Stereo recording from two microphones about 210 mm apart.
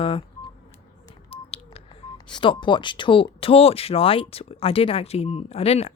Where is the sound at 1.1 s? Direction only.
30° left (ahead or behind).